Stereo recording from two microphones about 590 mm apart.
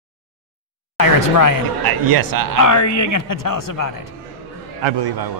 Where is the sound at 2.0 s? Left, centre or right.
Right.